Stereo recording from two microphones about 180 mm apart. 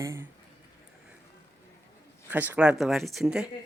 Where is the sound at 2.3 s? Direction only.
10° right (ahead or behind).